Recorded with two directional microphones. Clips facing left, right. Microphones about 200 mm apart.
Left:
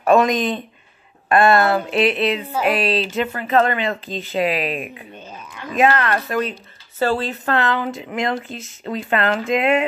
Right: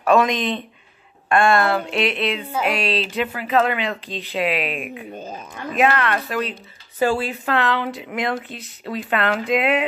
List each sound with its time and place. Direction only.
0.1 s speech: centre (ahead or behind)
5.1 s speech: 45° right (ahead or behind)
5.8 s speech: centre (ahead or behind)
6.5 s speech: 15° right (ahead or behind)
7.5 s speech: centre (ahead or behind)